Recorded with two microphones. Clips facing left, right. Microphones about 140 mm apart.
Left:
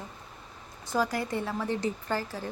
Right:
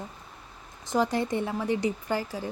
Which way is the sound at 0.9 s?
25° right (ahead or behind).